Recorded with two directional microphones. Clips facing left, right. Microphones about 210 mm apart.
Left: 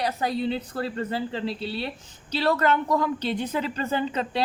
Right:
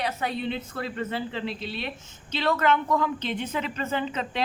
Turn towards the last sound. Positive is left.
turn(degrees=35)  # may be behind; listen again after turning